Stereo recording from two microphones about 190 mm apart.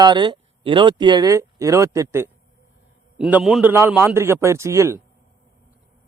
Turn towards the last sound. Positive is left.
turn(degrees=-15)  # may be behind; listen again after turning